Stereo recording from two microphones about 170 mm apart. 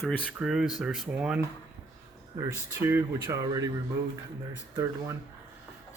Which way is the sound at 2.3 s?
20° right (ahead or behind).